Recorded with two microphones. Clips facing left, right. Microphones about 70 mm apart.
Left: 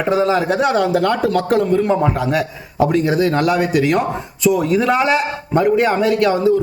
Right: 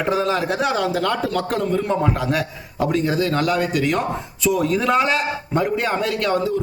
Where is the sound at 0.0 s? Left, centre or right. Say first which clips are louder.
Left 4 dB; centre.